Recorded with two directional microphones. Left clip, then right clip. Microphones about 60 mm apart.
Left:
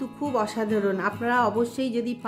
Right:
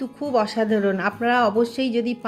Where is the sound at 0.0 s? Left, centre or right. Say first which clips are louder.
Right 4 dB; centre.